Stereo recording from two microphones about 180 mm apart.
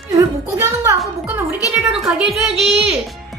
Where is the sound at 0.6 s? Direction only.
15° right (ahead or behind).